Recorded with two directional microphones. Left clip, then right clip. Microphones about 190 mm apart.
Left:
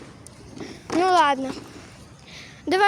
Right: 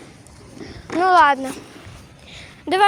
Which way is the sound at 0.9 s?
5° left (ahead or behind).